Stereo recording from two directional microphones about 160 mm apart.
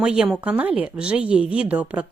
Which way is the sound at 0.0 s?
5° right (ahead or behind).